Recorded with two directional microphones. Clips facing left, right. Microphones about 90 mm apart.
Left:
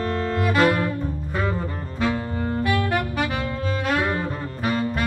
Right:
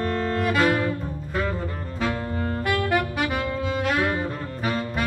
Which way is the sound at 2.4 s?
10° left (ahead or behind).